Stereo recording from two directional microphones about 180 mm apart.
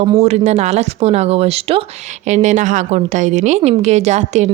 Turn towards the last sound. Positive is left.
turn(degrees=-40)  # may be behind; listen again after turning